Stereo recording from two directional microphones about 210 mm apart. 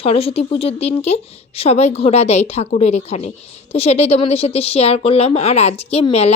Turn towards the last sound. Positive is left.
turn(degrees=30)  # may be behind; listen again after turning